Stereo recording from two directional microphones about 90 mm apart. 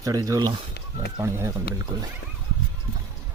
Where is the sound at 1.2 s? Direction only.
30° right (ahead or behind).